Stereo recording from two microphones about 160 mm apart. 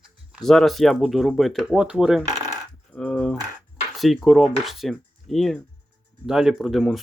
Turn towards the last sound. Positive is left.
turn(degrees=0)  # may be behind; listen again after turning